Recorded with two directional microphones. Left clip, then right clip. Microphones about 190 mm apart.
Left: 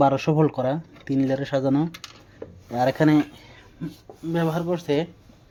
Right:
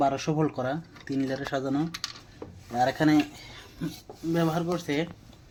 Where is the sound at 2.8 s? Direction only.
45° left (ahead or behind).